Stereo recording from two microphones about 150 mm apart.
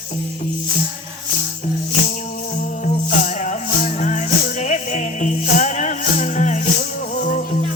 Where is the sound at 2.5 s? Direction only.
55° left (ahead or behind).